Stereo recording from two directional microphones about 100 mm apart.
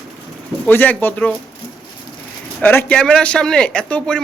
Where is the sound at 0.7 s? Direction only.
20° left (ahead or behind).